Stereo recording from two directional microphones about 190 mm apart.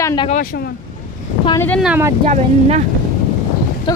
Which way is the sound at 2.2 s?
40° right (ahead or behind).